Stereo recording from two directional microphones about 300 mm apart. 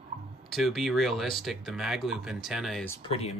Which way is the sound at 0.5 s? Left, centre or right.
Centre.